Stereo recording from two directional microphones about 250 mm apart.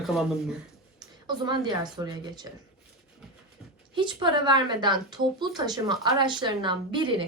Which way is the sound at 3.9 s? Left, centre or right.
Centre.